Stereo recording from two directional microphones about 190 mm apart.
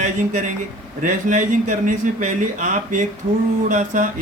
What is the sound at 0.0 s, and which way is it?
Speech, 40° right (ahead or behind).